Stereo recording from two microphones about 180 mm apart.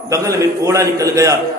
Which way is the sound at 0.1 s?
20° right (ahead or behind).